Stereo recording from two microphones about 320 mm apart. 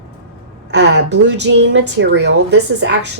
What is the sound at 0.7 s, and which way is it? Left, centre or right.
A woman's voice, right.